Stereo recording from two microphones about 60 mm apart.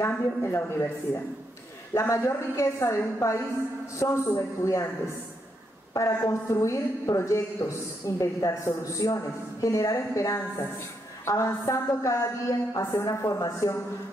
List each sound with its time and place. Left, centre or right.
0.0 s a woman's voice: left
5.9 s a man's voice: left